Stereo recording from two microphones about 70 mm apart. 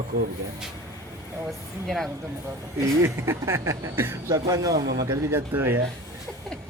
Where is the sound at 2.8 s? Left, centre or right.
Right.